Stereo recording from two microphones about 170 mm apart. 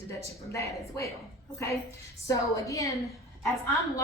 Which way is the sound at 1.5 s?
15° left (ahead or behind).